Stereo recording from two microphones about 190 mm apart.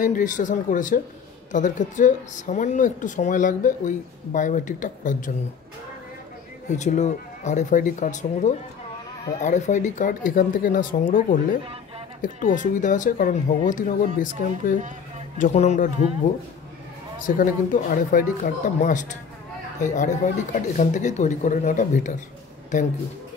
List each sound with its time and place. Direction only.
0.0 s speech: 45° left (ahead or behind)
6.7 s speech: 40° left (ahead or behind)
15.3 s speech: 40° left (ahead or behind)
17.2 s speech: 45° left (ahead or behind)